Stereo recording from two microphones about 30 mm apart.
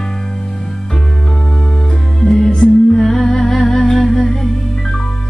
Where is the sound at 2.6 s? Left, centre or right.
Left.